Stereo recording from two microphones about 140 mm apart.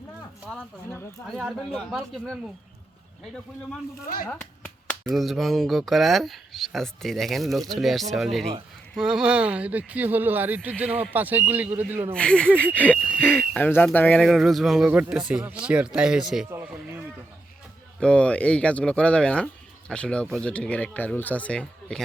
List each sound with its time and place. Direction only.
1.7 s speech: centre (ahead or behind)
4.0 s speech: 90° left
4.3 s a sound: 10° left (ahead or behind)
5.1 s speech: centre (ahead or behind)
12.1 s speech: 5° left (ahead or behind)
14.3 s speech: centre (ahead or behind)
18.0 s speech: 10° left (ahead or behind)